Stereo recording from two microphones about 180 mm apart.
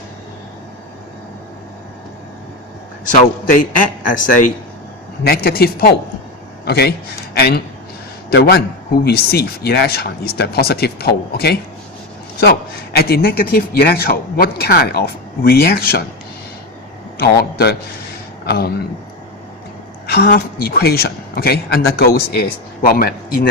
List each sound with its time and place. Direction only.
3.1 s a man's voice: 45° left (ahead or behind)
5.2 s a man's voice: 60° left (ahead or behind)
17.2 s a man's voice: 65° left (ahead or behind)
20.1 s a man's voice: 55° left (ahead or behind)